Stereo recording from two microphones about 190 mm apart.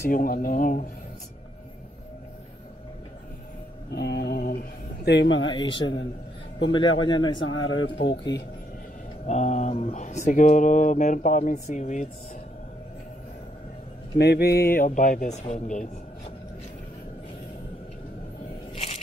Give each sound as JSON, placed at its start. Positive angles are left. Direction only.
{"t": 0.1, "sound": "speech", "side_deg": 50}
{"t": 3.9, "sound": "speech", "side_deg": 60}
{"t": 5.5, "sound": "a man's voice", "side_deg": 25}
{"t": 7.3, "sound": "speech", "side_deg": 90}
{"t": 9.2, "sound": "speech", "side_deg": 35}
{"t": 14.1, "sound": "speech", "side_deg": 60}